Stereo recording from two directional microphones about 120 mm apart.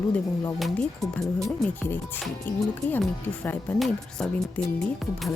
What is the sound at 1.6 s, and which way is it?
Speech, 15° left (ahead or behind).